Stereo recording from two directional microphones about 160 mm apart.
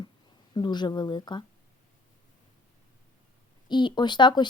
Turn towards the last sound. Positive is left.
turn(degrees=30)  # may be behind; listen again after turning